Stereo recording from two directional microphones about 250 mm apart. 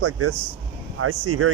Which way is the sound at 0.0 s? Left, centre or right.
Right.